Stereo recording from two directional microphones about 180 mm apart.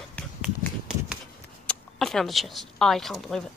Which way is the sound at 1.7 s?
Centre (ahead or behind).